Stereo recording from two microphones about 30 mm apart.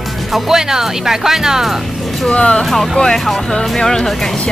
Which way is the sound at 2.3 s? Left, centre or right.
Left.